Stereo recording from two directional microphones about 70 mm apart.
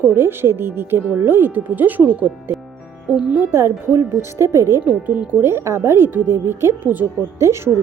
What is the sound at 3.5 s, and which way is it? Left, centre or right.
Speech, right.